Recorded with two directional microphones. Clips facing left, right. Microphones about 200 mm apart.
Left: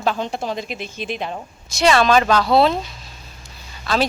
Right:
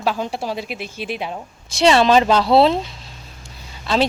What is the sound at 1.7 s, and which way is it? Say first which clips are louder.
Speech: right 2 dB; 30° right (ahead or behind).